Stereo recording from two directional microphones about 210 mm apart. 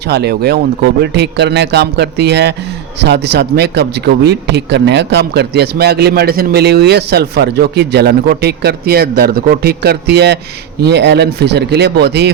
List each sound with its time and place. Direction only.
0.0 s a man's voice: 50° right (ahead or behind)